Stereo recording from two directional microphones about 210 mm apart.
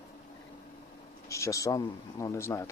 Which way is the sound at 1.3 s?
15° left (ahead or behind).